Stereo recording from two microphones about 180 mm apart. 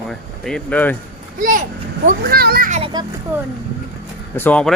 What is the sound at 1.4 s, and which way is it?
A child's voice, 50° right (ahead or behind).